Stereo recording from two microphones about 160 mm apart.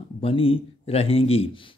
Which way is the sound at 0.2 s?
35° left (ahead or behind).